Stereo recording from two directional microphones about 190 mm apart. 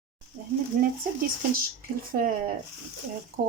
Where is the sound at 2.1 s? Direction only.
50° right (ahead or behind).